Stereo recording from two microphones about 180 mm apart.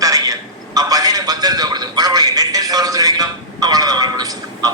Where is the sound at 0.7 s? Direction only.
20° right (ahead or behind).